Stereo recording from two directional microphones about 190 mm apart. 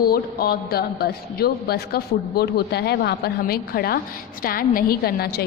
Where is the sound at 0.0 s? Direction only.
55° left (ahead or behind).